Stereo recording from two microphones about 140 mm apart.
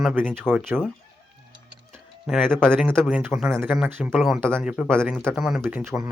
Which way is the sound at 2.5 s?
5° left (ahead or behind).